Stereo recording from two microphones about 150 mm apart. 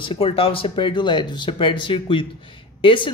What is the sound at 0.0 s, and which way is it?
Speech, 35° left (ahead or behind).